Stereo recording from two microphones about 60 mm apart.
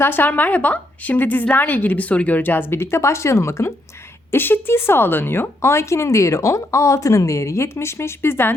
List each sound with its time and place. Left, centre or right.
0.0 s a woman's voice: left
4.3 s speech: left